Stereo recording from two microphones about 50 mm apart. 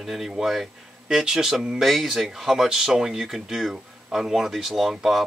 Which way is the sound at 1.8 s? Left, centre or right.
Centre.